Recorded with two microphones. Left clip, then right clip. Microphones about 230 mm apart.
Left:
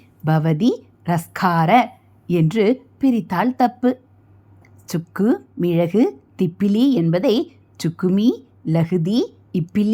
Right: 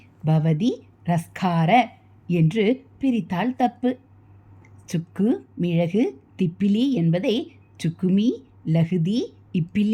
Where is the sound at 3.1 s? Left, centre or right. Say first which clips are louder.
Left 5 dB; centre.